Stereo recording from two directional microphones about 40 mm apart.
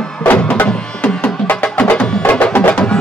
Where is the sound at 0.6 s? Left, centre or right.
Left.